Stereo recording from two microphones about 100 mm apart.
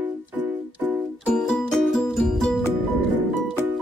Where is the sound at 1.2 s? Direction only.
10° left (ahead or behind).